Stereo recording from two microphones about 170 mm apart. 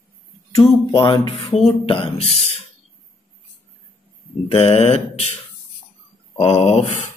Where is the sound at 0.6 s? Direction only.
30° left (ahead or behind).